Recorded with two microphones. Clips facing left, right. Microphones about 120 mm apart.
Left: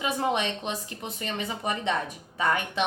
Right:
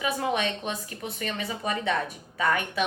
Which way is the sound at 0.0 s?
25° left (ahead or behind).